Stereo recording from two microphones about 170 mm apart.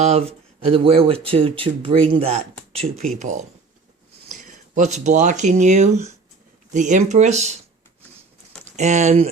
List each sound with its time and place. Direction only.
0.0 s speech: 40° right (ahead or behind)
2.9 s speech: centre (ahead or behind)
3.2 s speech: 45° right (ahead or behind)
8.6 s speech: 45° right (ahead or behind)